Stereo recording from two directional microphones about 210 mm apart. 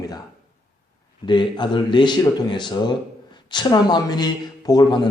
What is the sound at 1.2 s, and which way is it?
A man's voice, 20° left (ahead or behind).